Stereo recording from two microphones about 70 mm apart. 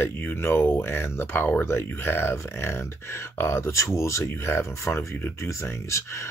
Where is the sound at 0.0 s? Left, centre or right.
Left.